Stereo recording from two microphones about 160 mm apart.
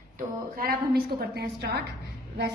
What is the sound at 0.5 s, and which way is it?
A woman's voice, 75° right (ahead or behind).